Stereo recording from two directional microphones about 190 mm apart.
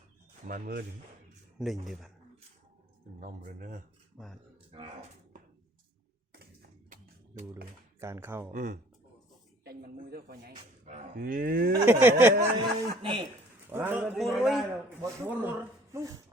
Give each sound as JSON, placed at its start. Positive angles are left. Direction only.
{"t": 0.4, "sound": "speech", "side_deg": -45}
{"t": 1.5, "sound": "speech", "side_deg": 0}
{"t": 3.2, "sound": "speech", "side_deg": -45}
{"t": 4.7, "sound": "speech", "side_deg": -35}
{"t": 6.4, "sound": "a sound", "side_deg": -55}
{"t": 8.0, "sound": "speech", "side_deg": -15}
{"t": 8.5, "sound": "speech", "side_deg": -45}
{"t": 10.5, "sound": "speech", "side_deg": -40}
{"t": 11.9, "sound": "speech", "side_deg": -10}
{"t": 12.5, "sound": "speech", "side_deg": -25}
{"t": 13.7, "sound": "speech", "side_deg": -10}
{"t": 14.0, "sound": "speech", "side_deg": 0}
{"t": 14.8, "sound": "speech", "side_deg": -10}